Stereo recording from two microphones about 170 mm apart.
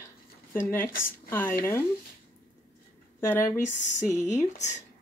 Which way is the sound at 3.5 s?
45° left (ahead or behind).